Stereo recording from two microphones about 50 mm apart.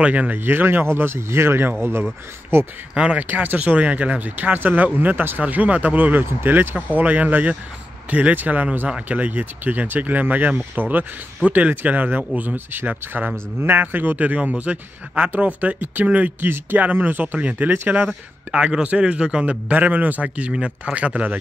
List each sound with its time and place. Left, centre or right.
0.0 s speech: right
0.4 s speech: right
2.9 s speech: right
3.2 s speech: right
16.3 s speech: right
19.7 s speech: right